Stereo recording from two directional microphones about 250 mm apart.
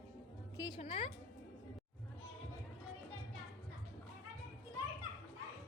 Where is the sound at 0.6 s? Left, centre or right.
Centre.